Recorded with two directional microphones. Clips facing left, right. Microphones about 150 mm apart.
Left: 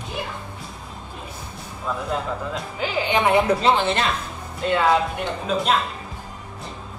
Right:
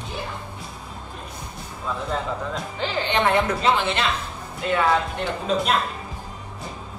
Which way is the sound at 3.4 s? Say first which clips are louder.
Left 3 dB; 35° left (ahead or behind).